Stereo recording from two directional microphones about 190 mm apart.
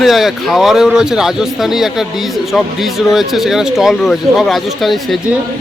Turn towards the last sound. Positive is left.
turn(degrees=0)  # may be behind; listen again after turning